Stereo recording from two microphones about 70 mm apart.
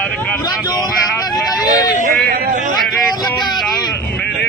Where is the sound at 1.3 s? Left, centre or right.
Left.